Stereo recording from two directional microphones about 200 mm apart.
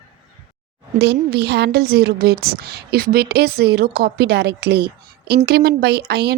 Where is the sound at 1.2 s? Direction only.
55° right (ahead or behind).